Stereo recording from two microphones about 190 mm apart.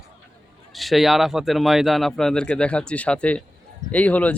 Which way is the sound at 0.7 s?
Centre (ahead or behind).